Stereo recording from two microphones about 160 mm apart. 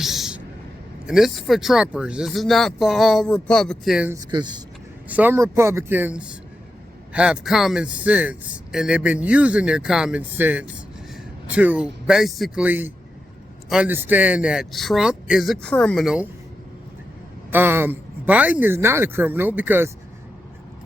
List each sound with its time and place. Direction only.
0.0 s a sound: centre (ahead or behind)
1.0 s speech: centre (ahead or behind)
4.3 s speech: 30° right (ahead or behind)
5.0 s a man's voice: 10° right (ahead or behind)
17.5 s a man's voice: 15° right (ahead or behind)